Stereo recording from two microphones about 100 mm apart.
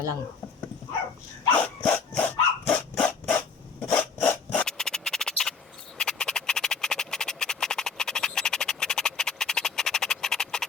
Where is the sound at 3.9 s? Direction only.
15° left (ahead or behind).